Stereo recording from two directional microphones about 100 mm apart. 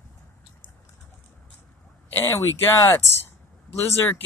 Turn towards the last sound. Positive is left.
turn(degrees=25)  # may be behind; listen again after turning